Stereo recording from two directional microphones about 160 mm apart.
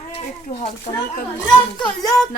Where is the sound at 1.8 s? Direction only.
25° left (ahead or behind).